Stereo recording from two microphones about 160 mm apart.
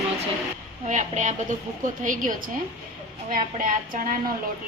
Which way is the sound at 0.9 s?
50° right (ahead or behind).